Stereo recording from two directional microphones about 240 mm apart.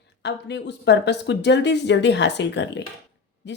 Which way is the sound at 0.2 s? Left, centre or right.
Left.